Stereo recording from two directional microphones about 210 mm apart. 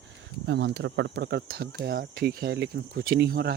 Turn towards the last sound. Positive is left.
turn(degrees=-50)  # may be behind; listen again after turning